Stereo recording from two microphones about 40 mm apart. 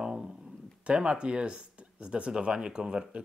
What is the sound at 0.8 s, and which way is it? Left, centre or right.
Speech, right.